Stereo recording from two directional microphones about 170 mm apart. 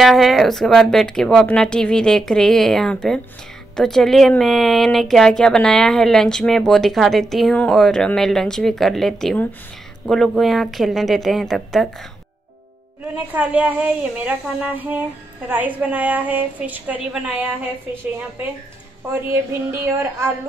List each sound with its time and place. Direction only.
0.0 s speech: centre (ahead or behind)
13.3 s a woman's voice: 10° right (ahead or behind)
19.0 s a woman's voice: 10° right (ahead or behind)